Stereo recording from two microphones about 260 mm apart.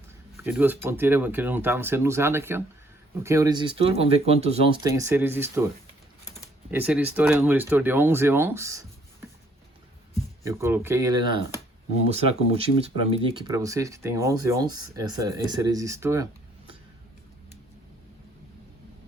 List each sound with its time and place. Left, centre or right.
0.3 s speech: centre
6.7 s speech: centre
10.4 s speech: centre